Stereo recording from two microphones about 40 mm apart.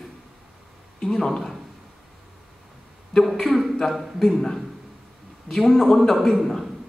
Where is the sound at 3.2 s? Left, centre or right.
Centre.